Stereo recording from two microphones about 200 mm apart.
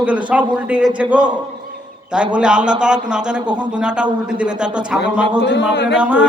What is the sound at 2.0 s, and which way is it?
Speech, 5° right (ahead or behind).